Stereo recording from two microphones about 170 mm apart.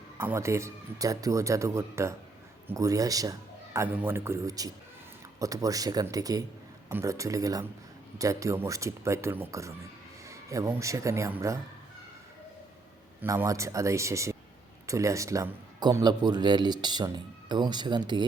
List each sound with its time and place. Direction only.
0.2 s speech: 15° right (ahead or behind)
10.2 s a sound: 20° right (ahead or behind)
10.8 s speech: 20° right (ahead or behind)
13.2 s speech: 15° right (ahead or behind)